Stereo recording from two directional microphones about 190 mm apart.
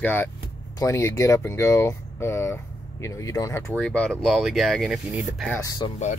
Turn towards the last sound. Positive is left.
turn(degrees=20)  # may be behind; listen again after turning